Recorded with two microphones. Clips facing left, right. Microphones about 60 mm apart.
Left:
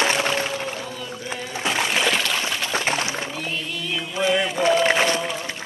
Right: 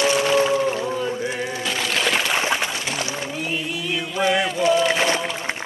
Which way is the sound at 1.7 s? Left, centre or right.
Left.